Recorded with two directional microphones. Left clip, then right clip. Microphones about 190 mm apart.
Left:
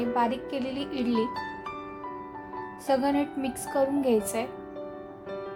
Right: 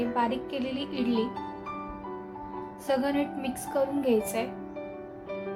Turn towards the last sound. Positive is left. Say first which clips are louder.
# left 1 dB
turn(degrees=25)  # may be behind; listen again after turning